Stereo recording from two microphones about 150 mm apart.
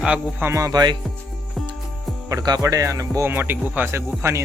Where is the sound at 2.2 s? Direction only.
25° right (ahead or behind).